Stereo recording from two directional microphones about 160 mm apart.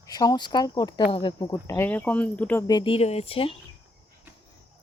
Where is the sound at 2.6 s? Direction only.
30° left (ahead or behind).